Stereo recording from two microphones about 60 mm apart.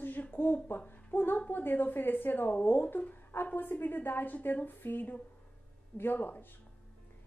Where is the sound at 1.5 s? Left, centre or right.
Left.